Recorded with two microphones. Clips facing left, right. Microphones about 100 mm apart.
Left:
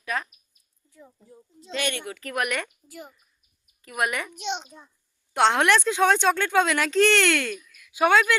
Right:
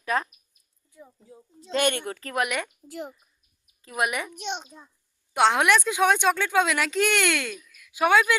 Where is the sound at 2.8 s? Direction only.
75° right (ahead or behind).